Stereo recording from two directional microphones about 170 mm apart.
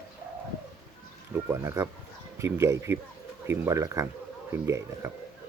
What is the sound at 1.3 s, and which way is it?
Speech, 15° right (ahead or behind).